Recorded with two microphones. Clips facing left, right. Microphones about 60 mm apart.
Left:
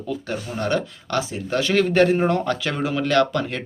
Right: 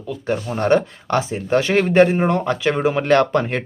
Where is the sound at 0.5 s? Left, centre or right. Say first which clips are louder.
Right 7 dB; right.